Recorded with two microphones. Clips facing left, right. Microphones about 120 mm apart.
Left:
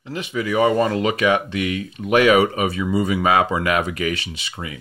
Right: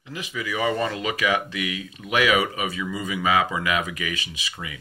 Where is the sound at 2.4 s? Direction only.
35° left (ahead or behind).